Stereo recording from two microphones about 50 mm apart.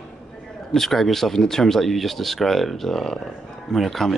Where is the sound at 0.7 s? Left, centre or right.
Centre.